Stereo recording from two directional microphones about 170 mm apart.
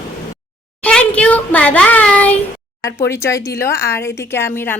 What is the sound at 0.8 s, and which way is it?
Speech, 5° left (ahead or behind).